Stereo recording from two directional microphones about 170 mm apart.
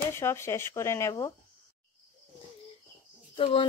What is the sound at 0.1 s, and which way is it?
Speech, 15° left (ahead or behind).